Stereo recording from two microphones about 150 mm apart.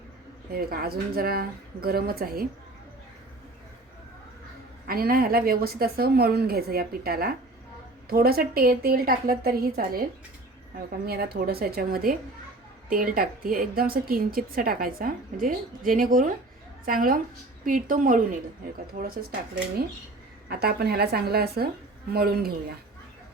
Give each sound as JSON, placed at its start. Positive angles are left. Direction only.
{"t": 0.5, "sound": "a woman's voice", "side_deg": -90}
{"t": 4.9, "sound": "a woman's voice", "side_deg": -85}
{"t": 18.9, "sound": "a woman's voice", "side_deg": -90}
{"t": 20.5, "sound": "a woman's voice", "side_deg": -90}